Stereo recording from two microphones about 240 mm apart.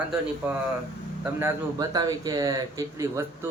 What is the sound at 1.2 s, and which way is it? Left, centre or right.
A man's voice, centre.